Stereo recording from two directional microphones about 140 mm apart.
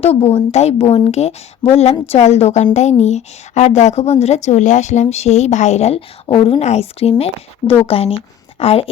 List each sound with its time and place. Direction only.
0.0 s a woman's voice: 45° left (ahead or behind)